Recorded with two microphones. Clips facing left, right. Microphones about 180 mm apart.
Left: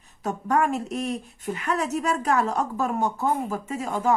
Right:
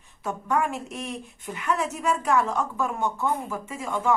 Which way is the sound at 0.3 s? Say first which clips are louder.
Left 3 dB; 40° left (ahead or behind).